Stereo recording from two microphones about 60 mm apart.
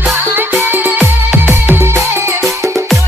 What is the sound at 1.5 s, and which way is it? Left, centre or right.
Music, right.